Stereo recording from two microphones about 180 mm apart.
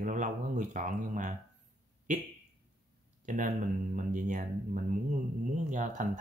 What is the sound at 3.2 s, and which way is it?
Speech, 45° right (ahead or behind).